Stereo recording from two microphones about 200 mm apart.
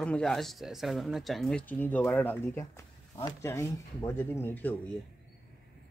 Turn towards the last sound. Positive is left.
turn(degrees=10)  # may be behind; listen again after turning